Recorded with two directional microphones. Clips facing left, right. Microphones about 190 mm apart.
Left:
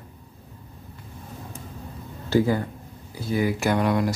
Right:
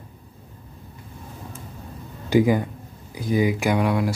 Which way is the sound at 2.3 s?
15° right (ahead or behind).